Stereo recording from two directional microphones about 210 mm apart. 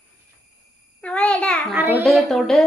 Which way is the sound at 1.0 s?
5° left (ahead or behind).